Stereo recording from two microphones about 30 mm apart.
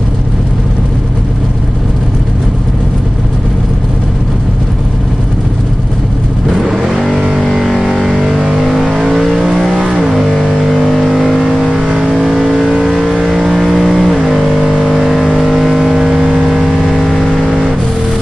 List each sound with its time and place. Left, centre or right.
6.6 s vehicle: centre
7.0 s vehicle: centre
10.1 s music: centre
10.9 s vehicle: centre
13.5 s vehicle: centre
16.9 s vehicle: centre
17.4 s vehicle: centre